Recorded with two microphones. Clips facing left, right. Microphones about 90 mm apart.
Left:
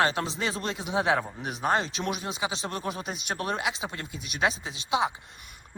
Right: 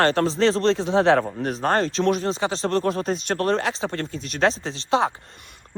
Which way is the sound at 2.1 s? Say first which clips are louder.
Right 10 dB; 10° left (ahead or behind).